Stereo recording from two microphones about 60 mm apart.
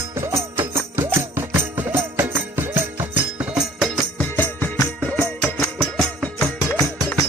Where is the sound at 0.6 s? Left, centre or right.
Right.